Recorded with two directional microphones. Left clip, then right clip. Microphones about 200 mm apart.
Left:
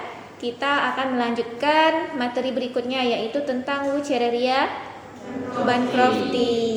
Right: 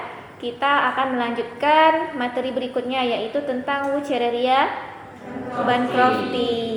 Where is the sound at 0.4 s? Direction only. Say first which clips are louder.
Right 3 dB; 20° left (ahead or behind).